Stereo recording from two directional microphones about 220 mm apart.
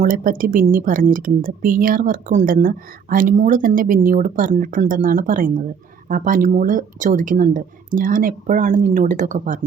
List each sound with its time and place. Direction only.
0.0 s speech: 35° right (ahead or behind)